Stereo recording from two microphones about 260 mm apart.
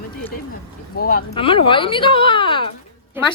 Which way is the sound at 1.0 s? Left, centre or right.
Left.